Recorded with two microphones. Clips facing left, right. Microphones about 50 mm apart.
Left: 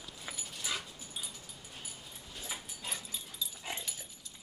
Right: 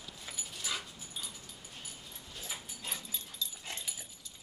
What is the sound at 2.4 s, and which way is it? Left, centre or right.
Dog, centre.